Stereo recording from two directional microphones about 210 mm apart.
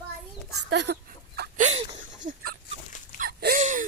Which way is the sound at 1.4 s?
35° right (ahead or behind).